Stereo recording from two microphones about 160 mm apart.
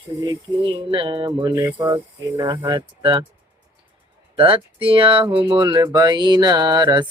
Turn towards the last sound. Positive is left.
turn(degrees=-25)  # may be behind; listen again after turning